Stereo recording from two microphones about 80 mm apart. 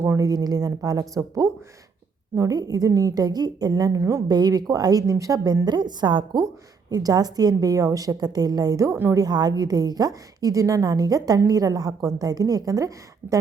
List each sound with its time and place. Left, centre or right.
0.0 s a sound: right
0.3 s a woman's voice: right
4.3 s a woman's voice: right
5.6 s a woman's voice: right
6.9 s a woman's voice: right